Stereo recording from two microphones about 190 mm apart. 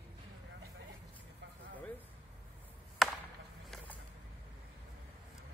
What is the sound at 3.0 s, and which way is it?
Chop, centre (ahead or behind).